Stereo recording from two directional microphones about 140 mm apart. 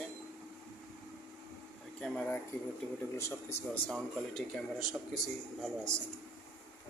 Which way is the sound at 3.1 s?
20° left (ahead or behind).